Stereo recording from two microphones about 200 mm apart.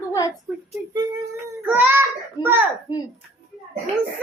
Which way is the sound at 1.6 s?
10° right (ahead or behind).